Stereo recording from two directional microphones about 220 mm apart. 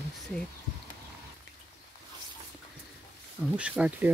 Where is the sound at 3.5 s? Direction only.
5° right (ahead or behind).